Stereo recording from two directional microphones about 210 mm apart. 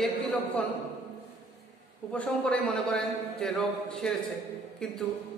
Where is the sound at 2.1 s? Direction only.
5° left (ahead or behind).